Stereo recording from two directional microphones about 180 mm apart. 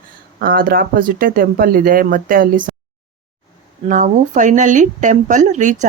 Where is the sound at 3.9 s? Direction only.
45° right (ahead or behind).